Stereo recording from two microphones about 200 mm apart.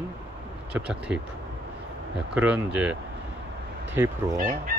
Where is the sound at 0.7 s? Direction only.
5° right (ahead or behind).